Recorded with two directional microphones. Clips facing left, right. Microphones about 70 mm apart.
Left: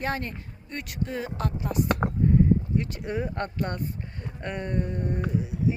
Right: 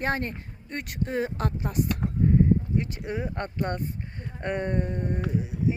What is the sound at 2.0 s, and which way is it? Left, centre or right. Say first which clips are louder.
Speech: left 3 dB; left.